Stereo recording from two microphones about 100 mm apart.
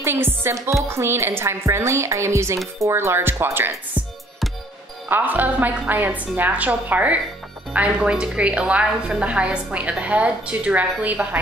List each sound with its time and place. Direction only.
0.0 s speech: 20° right (ahead or behind)
5.0 s a woman's voice: 20° right (ahead or behind)